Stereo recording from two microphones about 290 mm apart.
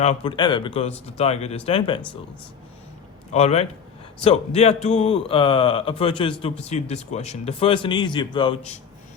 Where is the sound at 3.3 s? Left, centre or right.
Left.